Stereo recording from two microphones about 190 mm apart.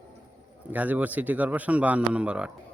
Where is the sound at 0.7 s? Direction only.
10° right (ahead or behind).